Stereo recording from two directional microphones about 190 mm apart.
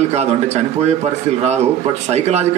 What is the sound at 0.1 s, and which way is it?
Speech, 35° right (ahead or behind).